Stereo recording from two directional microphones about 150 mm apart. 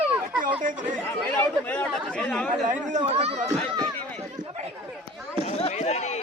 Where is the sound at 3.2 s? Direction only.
45° right (ahead or behind).